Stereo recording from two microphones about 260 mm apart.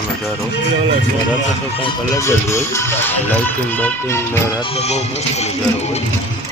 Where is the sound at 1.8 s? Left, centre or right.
Centre.